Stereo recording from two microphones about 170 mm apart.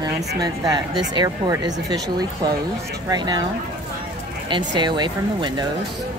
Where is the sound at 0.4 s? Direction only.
25° right (ahead or behind).